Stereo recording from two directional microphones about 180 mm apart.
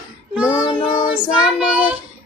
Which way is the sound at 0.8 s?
35° left (ahead or behind).